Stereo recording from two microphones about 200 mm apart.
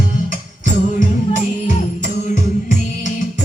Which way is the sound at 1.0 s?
40° left (ahead or behind).